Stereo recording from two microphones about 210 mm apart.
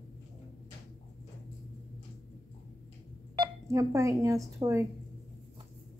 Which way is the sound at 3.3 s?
15° right (ahead or behind).